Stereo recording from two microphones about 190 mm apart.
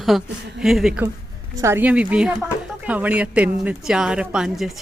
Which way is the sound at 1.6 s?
10° right (ahead or behind).